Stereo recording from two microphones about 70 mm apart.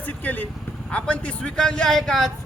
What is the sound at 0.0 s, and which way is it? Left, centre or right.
A man's voice, left.